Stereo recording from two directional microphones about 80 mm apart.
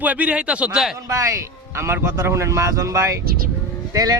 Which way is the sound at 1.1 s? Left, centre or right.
Right.